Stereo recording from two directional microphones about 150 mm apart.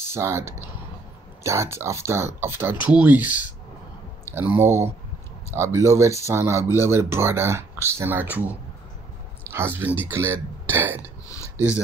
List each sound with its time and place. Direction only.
0.1 s speech: 15° right (ahead or behind)
4.6 s speech: 15° right (ahead or behind)
11.2 s a sound: 20° left (ahead or behind)